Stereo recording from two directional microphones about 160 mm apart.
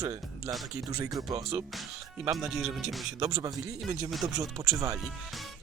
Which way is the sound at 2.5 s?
Centre (ahead or behind).